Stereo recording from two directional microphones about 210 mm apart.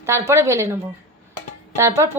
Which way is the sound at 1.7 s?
15° right (ahead or behind).